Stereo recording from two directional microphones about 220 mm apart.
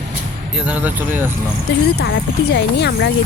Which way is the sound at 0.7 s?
5° right (ahead or behind).